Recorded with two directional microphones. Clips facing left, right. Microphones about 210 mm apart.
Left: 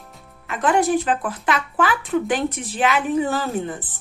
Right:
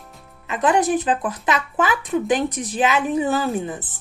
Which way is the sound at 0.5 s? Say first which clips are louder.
Even; 20° right (ahead or behind).